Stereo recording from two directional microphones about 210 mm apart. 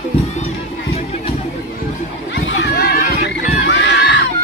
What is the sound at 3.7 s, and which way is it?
Crowd, 55° left (ahead or behind).